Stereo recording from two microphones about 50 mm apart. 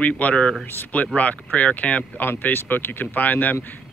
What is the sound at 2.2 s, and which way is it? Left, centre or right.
Speech, left.